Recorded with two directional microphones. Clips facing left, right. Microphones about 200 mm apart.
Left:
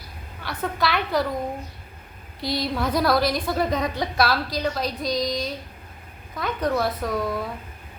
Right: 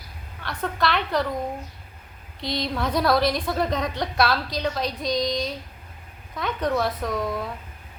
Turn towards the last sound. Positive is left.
turn(degrees=5)  # may be behind; listen again after turning